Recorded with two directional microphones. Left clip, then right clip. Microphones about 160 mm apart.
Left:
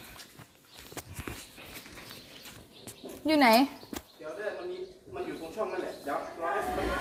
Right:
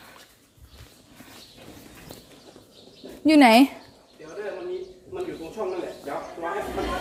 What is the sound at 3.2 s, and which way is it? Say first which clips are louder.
Speech: right 7 dB; 90° right.